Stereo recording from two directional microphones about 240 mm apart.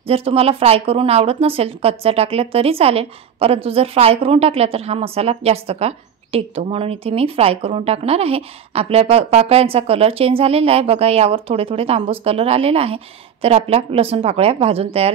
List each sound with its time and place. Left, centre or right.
0.1 s speech: right